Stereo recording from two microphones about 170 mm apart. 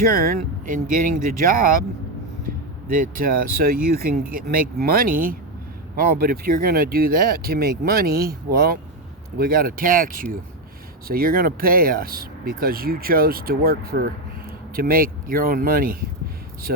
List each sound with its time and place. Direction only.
0.0 s speech: 60° right (ahead or behind)
2.5 s vehicle: 60° right (ahead or behind)
2.8 s speech: 55° right (ahead or behind)